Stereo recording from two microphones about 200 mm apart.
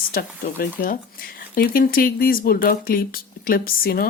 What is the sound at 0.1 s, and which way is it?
Speech, 50° left (ahead or behind).